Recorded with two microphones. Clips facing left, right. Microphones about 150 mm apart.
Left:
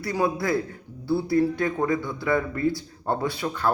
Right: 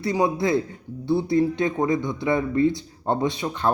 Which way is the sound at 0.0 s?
20° right (ahead or behind).